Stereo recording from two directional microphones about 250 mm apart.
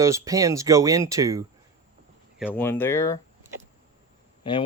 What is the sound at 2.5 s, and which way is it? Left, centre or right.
Speech, centre.